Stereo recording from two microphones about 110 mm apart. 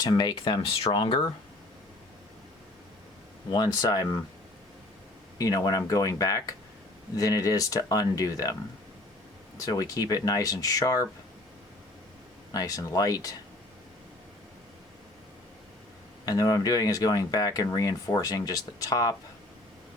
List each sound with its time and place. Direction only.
0.0 s speech: 40° left (ahead or behind)
3.5 s speech: 40° left (ahead or behind)
5.4 s speech: 35° left (ahead or behind)
9.6 s speech: 35° left (ahead or behind)
12.5 s speech: 35° left (ahead or behind)
16.2 s speech: 35° left (ahead or behind)